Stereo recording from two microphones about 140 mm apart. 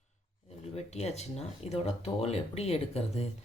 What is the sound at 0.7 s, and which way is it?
Speech, 50° left (ahead or behind).